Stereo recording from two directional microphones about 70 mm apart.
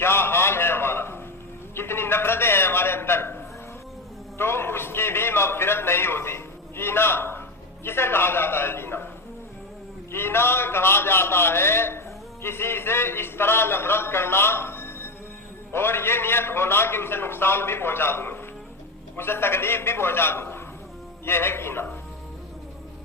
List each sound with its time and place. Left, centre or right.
0.0 s a sound: left
7.9 s a man's voice: left
10.1 s a man's voice: left